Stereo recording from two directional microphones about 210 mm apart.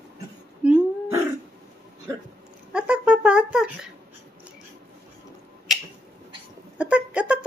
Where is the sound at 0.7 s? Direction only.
10° right (ahead or behind).